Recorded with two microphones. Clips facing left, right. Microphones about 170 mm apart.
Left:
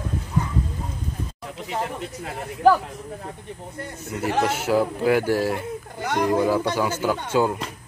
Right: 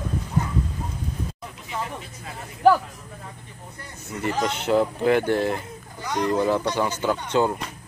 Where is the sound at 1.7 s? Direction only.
60° left (ahead or behind).